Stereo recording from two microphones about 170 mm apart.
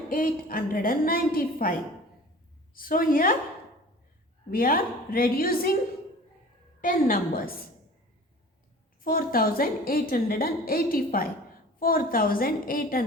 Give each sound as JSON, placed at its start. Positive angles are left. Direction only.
{"t": 0.1, "sound": "a woman's voice", "side_deg": 55}
{"t": 2.7, "sound": "a woman's voice", "side_deg": 55}
{"t": 4.5, "sound": "a woman's voice", "side_deg": 60}
{"t": 6.8, "sound": "a woman's voice", "side_deg": 55}
{"t": 9.0, "sound": "a woman's voice", "side_deg": 60}